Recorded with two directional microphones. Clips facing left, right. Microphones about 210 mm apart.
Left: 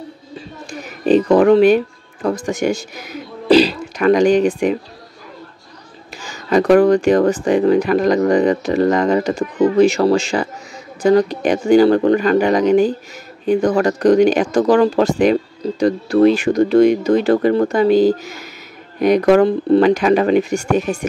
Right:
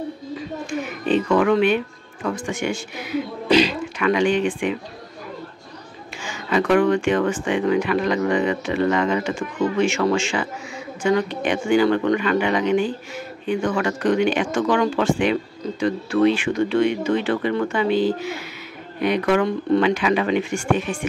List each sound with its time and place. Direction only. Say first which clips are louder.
0.4 s a sound: right 4 dB; 35° left (ahead or behind)
2.2 s speech: left 6 dB; 40° left (ahead or behind)
6.2 s speech: left 7 dB; 40° left (ahead or behind)